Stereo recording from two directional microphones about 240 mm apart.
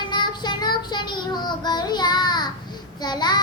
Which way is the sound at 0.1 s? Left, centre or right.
Centre.